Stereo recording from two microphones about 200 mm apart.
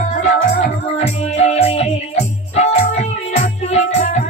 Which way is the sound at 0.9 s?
30° left (ahead or behind).